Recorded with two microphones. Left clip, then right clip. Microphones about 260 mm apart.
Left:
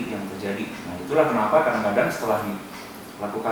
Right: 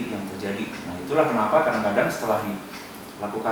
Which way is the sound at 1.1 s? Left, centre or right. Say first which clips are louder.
Left 1 dB; centre.